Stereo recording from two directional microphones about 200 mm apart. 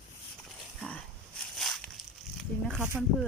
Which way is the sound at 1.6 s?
Centre (ahead or behind).